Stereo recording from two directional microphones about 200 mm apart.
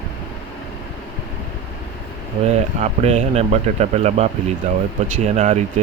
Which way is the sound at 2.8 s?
35° right (ahead or behind).